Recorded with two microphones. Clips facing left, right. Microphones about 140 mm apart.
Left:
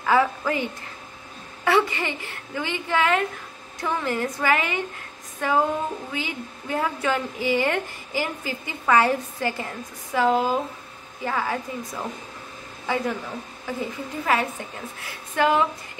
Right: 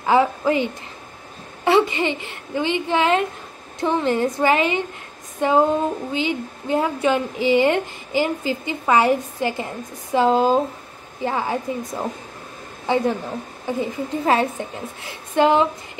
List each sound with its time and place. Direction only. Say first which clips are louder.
0.0 s a woman's voice: right 4 dB; 25° right (ahead or behind)